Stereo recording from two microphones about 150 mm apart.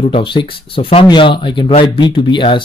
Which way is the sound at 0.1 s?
35° left (ahead or behind).